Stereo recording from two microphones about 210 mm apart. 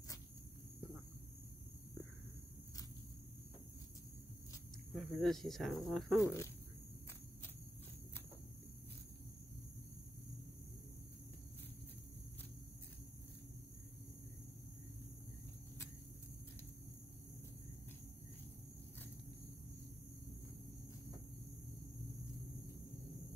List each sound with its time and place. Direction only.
4.9 s speech: centre (ahead or behind)
6.2 s speech: 15° left (ahead or behind)